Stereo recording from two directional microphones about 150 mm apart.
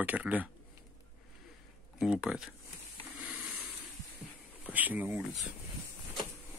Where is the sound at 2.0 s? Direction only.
5° right (ahead or behind).